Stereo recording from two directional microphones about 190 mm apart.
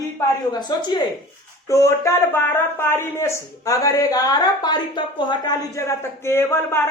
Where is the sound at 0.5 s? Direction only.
25° left (ahead or behind).